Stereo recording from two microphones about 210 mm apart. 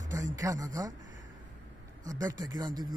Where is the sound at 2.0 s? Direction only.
15° right (ahead or behind).